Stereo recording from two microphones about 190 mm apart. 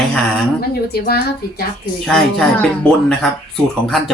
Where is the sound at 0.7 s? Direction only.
55° left (ahead or behind).